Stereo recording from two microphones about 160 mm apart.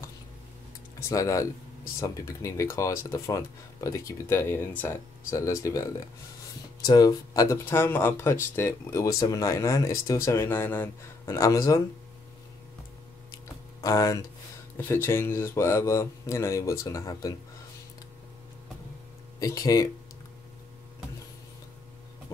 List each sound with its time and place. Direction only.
0.9 s speech: 20° left (ahead or behind)
13.3 s a sound: 20° left (ahead or behind)
15.0 s speech: 15° left (ahead or behind)
19.4 s speech: 20° left (ahead or behind)